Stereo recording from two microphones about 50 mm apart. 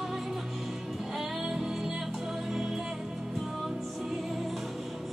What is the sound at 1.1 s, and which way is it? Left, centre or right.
Music, centre.